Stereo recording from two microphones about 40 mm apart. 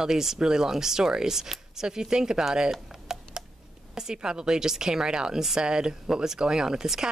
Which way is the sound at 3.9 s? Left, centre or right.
Centre.